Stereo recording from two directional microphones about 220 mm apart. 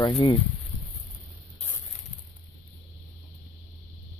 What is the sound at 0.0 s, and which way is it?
Speech, 20° left (ahead or behind).